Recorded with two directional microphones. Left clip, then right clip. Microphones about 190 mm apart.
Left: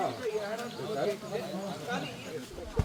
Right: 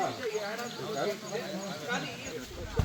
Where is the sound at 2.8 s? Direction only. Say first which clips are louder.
Even; 25° right (ahead or behind).